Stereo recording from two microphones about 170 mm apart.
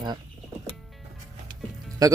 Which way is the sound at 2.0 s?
20° right (ahead or behind).